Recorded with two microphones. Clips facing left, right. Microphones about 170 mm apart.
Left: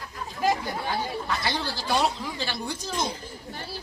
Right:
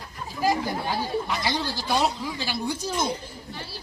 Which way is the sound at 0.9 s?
15° right (ahead or behind).